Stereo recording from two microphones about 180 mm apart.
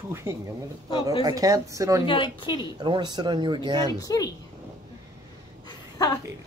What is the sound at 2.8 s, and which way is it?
Speech, 25° right (ahead or behind).